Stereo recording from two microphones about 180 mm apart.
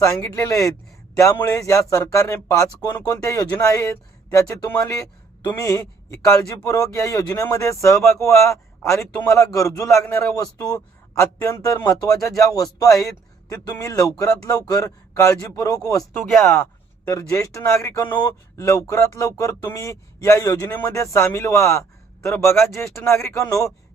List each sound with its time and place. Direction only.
0.0 s a man's voice: 15° left (ahead or behind)
16.3 s speech: centre (ahead or behind)
17.1 s speech: 15° left (ahead or behind)